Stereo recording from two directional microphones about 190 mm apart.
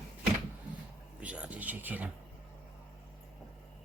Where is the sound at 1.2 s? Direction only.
5° right (ahead or behind).